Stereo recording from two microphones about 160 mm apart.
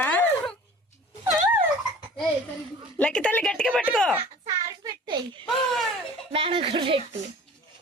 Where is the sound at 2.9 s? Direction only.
5° left (ahead or behind).